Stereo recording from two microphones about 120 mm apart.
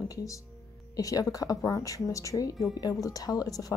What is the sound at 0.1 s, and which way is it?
Speech, 30° left (ahead or behind).